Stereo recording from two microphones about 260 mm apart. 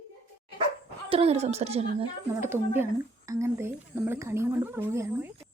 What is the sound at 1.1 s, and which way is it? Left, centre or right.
Speech, right.